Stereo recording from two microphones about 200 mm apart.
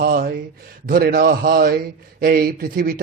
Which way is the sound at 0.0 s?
50° right (ahead or behind).